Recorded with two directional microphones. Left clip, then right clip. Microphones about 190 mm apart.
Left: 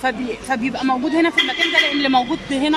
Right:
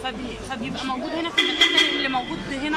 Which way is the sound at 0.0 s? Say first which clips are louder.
Left 8 dB; 35° left (ahead or behind).